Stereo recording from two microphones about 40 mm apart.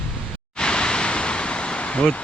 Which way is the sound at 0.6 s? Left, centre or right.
Left.